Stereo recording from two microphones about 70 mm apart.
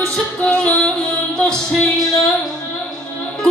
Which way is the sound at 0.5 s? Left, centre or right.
Centre.